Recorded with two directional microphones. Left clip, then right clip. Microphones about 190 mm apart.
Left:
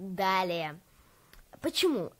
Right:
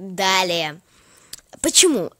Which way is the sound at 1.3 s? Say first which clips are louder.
Right 13 dB; 35° right (ahead or behind).